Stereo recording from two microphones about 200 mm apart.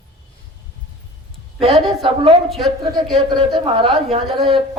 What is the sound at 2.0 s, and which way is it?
Speech, 30° right (ahead or behind).